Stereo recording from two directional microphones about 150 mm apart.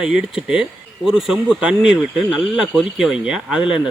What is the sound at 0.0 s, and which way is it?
Speech, 5° right (ahead or behind).